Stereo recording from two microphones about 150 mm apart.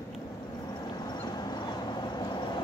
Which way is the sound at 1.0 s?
30° left (ahead or behind).